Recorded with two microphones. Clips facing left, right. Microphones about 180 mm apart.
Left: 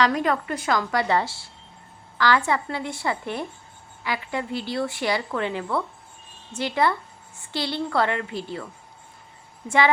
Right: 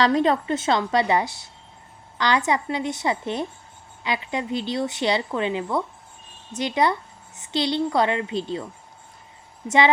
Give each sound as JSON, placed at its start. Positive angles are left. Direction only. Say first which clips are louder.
{"t": 0.0, "sound": "a woman's voice", "louder": "right 3 dB", "side_deg": -25}
{"t": 9.6, "sound": "a woman's voice", "louder": "right 2 dB", "side_deg": -20}